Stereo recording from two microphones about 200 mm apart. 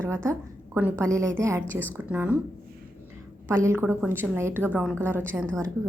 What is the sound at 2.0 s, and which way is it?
Speech, 5° right (ahead or behind).